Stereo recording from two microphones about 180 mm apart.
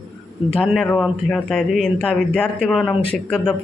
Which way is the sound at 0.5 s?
5° left (ahead or behind).